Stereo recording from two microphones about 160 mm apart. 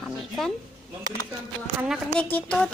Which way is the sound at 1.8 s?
Centre (ahead or behind).